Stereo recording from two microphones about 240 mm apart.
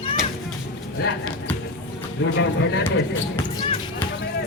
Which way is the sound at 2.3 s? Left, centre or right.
Left.